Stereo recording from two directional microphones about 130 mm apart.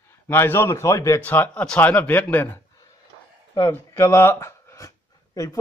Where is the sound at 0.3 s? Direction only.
20° left (ahead or behind).